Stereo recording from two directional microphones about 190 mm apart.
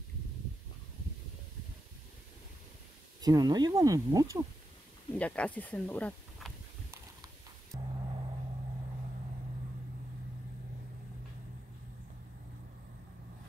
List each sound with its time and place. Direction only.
3.2 s speech: 20° right (ahead or behind)
5.1 s speech: 5° left (ahead or behind)
7.7 s gong: 20° right (ahead or behind)